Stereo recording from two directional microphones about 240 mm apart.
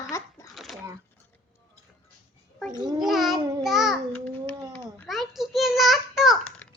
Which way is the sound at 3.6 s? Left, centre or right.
Centre.